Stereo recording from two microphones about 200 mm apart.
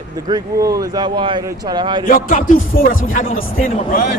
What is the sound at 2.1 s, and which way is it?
Speech, 45° left (ahead or behind).